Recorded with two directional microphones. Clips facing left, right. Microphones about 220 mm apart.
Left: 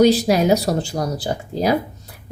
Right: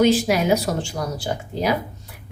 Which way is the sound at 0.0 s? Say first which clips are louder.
Left 3 dB; 35° left (ahead or behind).